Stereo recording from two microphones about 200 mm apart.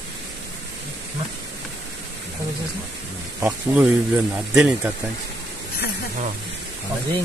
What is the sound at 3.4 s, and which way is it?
Speech, 5° right (ahead or behind).